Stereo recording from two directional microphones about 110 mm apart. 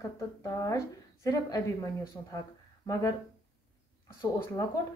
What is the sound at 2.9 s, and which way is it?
Speech, 30° left (ahead or behind).